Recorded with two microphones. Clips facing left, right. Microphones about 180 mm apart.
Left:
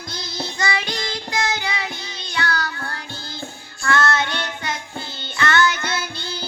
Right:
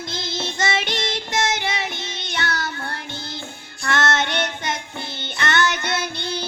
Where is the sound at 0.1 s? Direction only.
25° right (ahead or behind).